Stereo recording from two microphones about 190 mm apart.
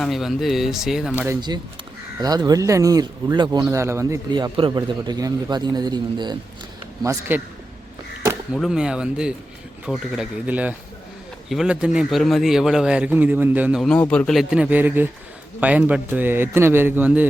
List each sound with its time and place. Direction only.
0.0 s a man's voice: centre (ahead or behind)
2.2 s a man's voice: 20° right (ahead or behind)
8.5 s a man's voice: centre (ahead or behind)